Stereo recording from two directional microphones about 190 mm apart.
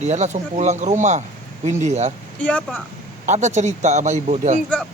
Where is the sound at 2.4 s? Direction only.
5° left (ahead or behind).